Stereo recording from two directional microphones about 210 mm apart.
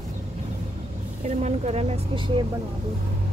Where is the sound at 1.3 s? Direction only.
30° right (ahead or behind).